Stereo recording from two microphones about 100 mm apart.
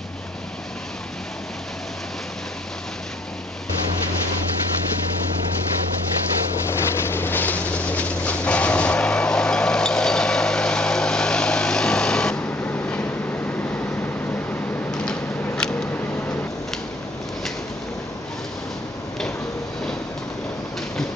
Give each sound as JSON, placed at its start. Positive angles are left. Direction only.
{"t": 7.0, "sound": "train", "side_deg": 20}
{"t": 12.6, "sound": "vehicle", "side_deg": 15}
{"t": 14.9, "sound": "a sound", "side_deg": 5}